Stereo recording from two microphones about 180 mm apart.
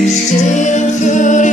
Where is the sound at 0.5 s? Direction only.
40° left (ahead or behind).